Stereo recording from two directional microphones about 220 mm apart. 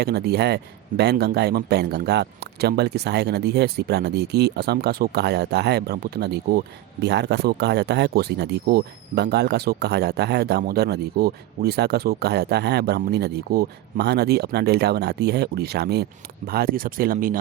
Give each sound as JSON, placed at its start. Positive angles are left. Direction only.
{"t": 0.0, "sound": "speech", "side_deg": -45}